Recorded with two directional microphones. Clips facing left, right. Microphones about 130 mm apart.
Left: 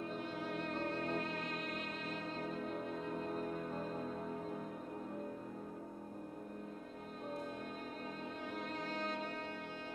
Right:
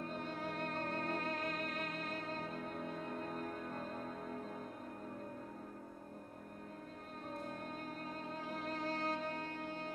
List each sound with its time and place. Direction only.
0.2 s music: 45° right (ahead or behind)